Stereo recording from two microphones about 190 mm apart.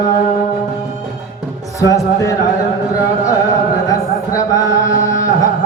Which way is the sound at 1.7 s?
15° left (ahead or behind).